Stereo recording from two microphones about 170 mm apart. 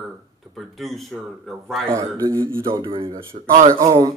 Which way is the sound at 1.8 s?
15° right (ahead or behind).